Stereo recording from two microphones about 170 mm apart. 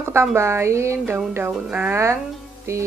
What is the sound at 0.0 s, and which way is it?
A woman's voice, 15° right (ahead or behind).